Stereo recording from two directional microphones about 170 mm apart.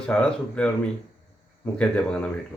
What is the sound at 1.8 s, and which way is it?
Speech, 5° left (ahead or behind).